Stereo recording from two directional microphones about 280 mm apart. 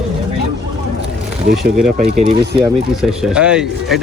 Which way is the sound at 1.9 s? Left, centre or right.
Right.